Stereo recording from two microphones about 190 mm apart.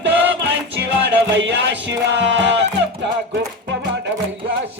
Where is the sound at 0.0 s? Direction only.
70° right (ahead or behind).